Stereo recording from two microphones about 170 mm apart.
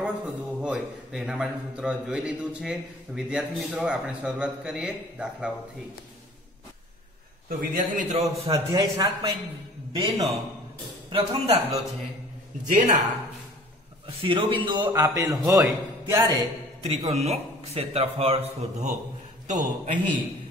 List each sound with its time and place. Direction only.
0.0 s a man's voice: 5° right (ahead or behind)
7.4 s a man's voice: 50° right (ahead or behind)
8.5 s a man's voice: 25° right (ahead or behind)
11.1 s a man's voice: 35° right (ahead or behind)
12.6 s a man's voice: 50° right (ahead or behind)
14.0 s a man's voice: 30° right (ahead or behind)
16.8 s a man's voice: 35° right (ahead or behind)